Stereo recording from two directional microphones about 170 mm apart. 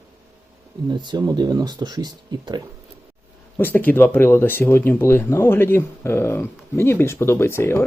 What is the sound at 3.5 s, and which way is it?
Speech, 10° left (ahead or behind).